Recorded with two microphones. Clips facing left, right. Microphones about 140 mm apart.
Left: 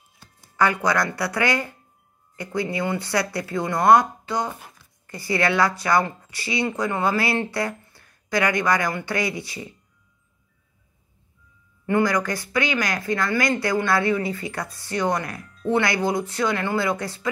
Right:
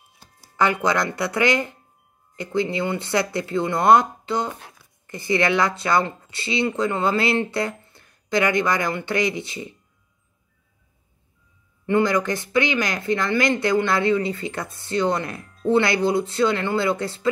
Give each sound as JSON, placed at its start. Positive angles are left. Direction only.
{"t": 0.6, "sound": "speech", "side_deg": -20}
{"t": 4.5, "sound": "speech", "side_deg": 5}
{"t": 4.7, "sound": "speech", "side_deg": -20}
{"t": 11.8, "sound": "speech", "side_deg": -25}